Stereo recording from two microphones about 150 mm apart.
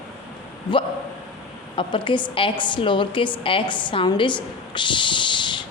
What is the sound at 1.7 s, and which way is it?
Speech, 35° left (ahead or behind).